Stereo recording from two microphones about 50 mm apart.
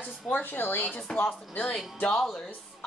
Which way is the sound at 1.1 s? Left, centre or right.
Centre.